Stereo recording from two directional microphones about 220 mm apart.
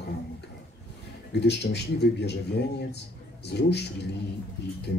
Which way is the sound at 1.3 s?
50° left (ahead or behind).